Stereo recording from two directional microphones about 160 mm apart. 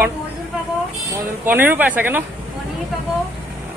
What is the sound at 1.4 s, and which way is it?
Speech, 15° right (ahead or behind).